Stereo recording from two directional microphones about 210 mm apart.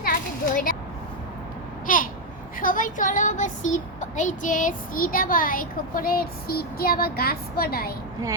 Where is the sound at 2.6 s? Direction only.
40° left (ahead or behind).